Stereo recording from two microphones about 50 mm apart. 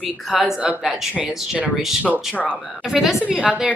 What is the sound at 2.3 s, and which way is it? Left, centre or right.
Speech, left.